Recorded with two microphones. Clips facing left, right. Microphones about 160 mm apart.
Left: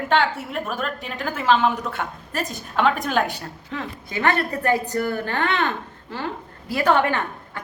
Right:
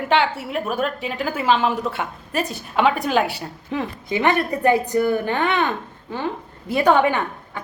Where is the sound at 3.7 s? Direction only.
20° right (ahead or behind).